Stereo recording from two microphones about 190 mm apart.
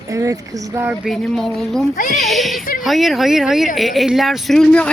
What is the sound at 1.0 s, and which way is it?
Speech, centre (ahead or behind).